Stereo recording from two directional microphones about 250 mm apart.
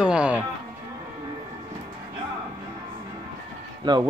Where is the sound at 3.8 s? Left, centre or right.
Centre.